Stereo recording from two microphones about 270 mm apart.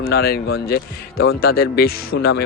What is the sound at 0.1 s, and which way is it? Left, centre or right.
Speech, left.